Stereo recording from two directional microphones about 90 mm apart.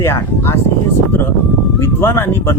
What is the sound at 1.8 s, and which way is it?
Speech, 30° left (ahead or behind).